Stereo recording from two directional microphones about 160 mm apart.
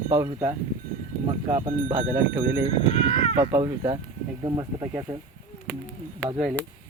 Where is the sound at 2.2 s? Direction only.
10° right (ahead or behind).